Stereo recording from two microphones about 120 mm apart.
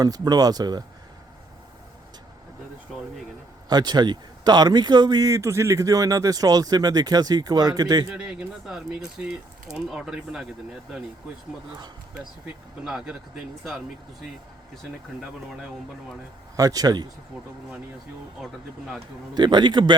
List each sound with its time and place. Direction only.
0.0 s speech: 30° right (ahead or behind)
3.7 s speech: 35° right (ahead or behind)
8.1 s speech: 10° right (ahead or behind)
12.8 s speech: 5° right (ahead or behind)
16.6 s speech: 30° right (ahead or behind)
17.3 s speech: 10° right (ahead or behind)
19.3 s speech: 40° right (ahead or behind)